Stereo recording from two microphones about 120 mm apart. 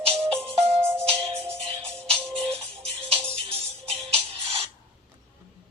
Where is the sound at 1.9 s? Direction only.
5° left (ahead or behind).